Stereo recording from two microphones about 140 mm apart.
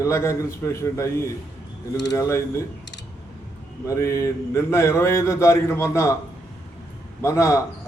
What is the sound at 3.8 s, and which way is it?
Speech, 20° left (ahead or behind).